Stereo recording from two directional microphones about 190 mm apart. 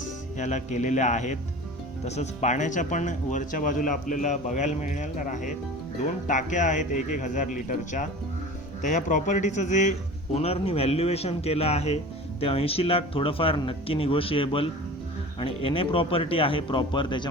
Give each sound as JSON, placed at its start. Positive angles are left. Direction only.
{"t": 0.3, "sound": "speech", "side_deg": 40}